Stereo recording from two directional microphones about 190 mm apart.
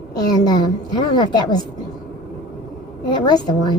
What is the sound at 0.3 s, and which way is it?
A woman's voice, 20° left (ahead or behind).